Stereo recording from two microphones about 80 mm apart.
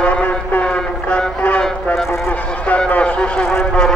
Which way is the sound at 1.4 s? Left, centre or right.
Centre.